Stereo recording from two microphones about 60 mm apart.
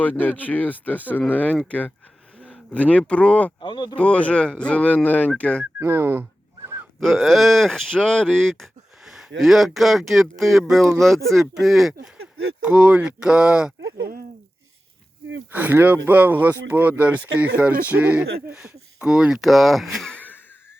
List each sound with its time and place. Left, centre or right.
0.0 s speech: left
5.4 s speech: centre
5.8 s speech: right
7.0 s speech: centre
12.6 s speech: right
15.5 s speech: right; by 19.5 s centre
19.5 s speech: centre
20.1 s a sound: left